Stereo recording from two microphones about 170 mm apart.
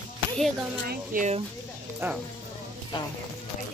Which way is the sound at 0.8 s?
55° right (ahead or behind).